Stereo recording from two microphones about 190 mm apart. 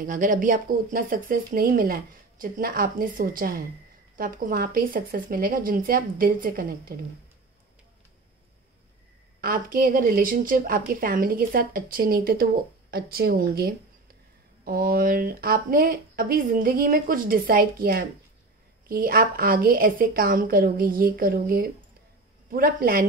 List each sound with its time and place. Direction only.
0.0 s speech: 45° right (ahead or behind)
9.4 s speech: 50° right (ahead or behind)